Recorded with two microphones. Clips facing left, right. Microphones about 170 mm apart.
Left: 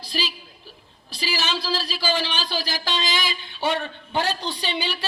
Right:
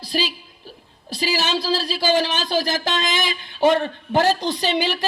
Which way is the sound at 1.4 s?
40° right (ahead or behind).